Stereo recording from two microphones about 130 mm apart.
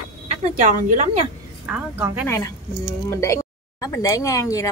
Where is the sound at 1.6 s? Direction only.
15° right (ahead or behind).